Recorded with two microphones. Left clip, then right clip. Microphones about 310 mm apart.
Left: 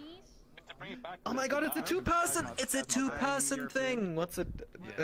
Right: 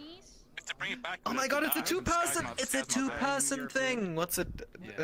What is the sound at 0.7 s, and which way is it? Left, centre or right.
Speech, right.